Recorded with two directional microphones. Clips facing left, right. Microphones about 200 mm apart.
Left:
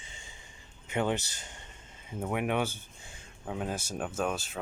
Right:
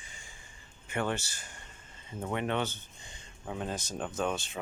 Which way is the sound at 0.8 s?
20° left (ahead or behind).